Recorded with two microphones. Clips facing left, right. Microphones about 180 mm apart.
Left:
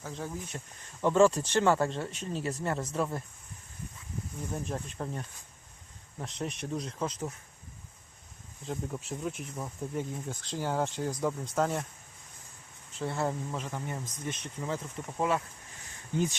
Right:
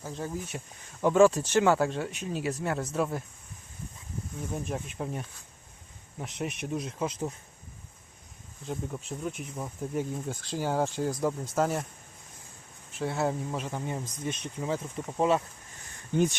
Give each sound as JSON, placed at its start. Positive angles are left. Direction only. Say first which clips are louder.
{"t": 0.0, "sound": "speech", "louder": "right 3 dB", "side_deg": -5}
{"t": 4.5, "sound": "speech", "louder": "right 2 dB", "side_deg": -5}
{"t": 8.6, "sound": "speech", "louder": "right 1 dB", "side_deg": 0}
{"t": 13.0, "sound": "speech", "louder": "right 3 dB", "side_deg": -10}